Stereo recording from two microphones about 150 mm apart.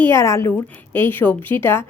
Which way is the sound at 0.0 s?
20° left (ahead or behind).